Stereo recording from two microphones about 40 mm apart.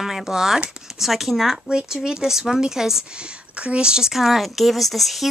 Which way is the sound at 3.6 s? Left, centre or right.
Right.